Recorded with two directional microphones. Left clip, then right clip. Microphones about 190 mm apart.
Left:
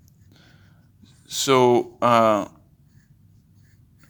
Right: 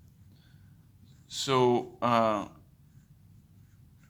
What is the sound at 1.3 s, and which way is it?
A man's voice, 35° left (ahead or behind).